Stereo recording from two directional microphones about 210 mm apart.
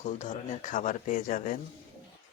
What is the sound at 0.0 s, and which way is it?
Speech, 35° left (ahead or behind).